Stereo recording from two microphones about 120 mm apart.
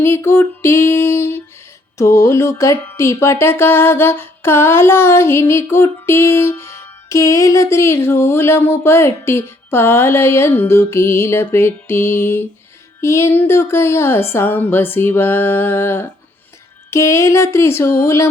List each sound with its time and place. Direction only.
0.0 s speech: 20° left (ahead or behind)